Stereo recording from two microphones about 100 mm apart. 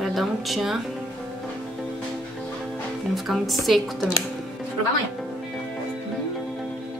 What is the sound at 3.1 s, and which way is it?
Speech, centre (ahead or behind).